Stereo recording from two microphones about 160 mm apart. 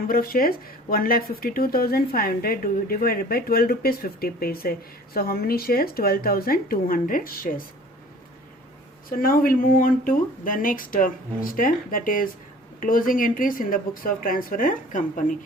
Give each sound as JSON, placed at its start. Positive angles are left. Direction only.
{"t": 0.1, "sound": "speech", "side_deg": 65}
{"t": 9.0, "sound": "speech", "side_deg": 65}